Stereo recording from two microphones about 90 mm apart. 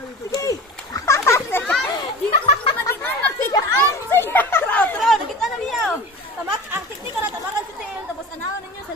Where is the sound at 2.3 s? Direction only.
85° left.